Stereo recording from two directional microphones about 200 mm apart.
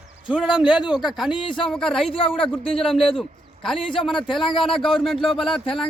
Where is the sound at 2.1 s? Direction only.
25° left (ahead or behind).